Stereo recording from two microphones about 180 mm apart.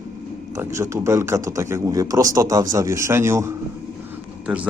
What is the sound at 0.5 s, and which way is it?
A man's voice, 15° right (ahead or behind).